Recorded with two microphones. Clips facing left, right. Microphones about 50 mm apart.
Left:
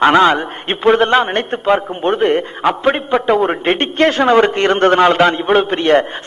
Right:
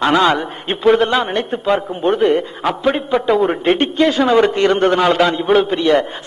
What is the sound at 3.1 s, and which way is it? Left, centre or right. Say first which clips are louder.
Speech: even; centre.